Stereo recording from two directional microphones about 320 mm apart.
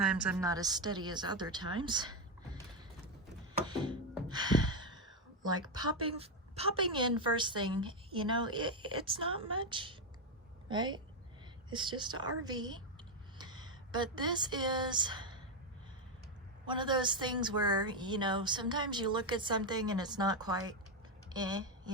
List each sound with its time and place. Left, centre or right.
0.0 s a woman's voice: centre
3.7 s a woman's voice: centre
4.1 s gasp: centre
5.6 s a woman's voice: centre
16.6 s a woman's voice: centre